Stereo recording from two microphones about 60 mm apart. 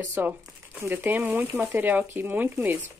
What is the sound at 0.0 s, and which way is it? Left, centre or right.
A woman's voice, right.